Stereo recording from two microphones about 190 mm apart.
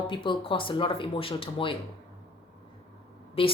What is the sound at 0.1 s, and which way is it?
Speech, 25° left (ahead or behind).